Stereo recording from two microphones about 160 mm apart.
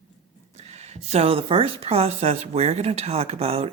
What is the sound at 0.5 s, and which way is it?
A woman's voice, 45° right (ahead or behind).